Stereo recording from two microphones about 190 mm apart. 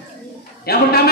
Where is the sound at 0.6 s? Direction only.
55° left (ahead or behind).